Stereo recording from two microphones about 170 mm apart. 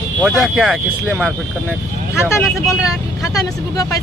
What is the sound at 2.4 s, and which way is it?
Speech, 15° left (ahead or behind).